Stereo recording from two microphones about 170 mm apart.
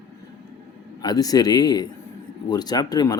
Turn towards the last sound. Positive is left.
turn(degrees=25)  # may be behind; listen again after turning